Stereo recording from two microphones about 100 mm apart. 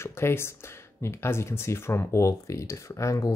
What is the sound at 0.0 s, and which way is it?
Speech, 25° left (ahead or behind).